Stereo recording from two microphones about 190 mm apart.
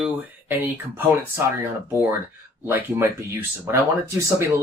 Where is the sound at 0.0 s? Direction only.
10° right (ahead or behind).